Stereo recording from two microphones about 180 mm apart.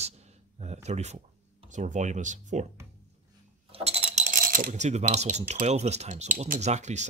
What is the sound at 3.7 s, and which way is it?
Cutlery, 35° right (ahead or behind).